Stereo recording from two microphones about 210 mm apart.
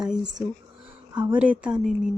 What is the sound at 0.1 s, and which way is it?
Speech, 5° right (ahead or behind).